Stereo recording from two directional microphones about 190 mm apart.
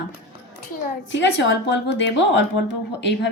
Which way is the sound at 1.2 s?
70° left (ahead or behind).